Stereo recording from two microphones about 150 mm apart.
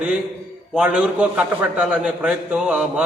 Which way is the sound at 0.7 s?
5° right (ahead or behind).